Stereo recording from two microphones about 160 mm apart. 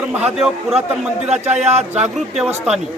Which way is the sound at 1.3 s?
45° right (ahead or behind).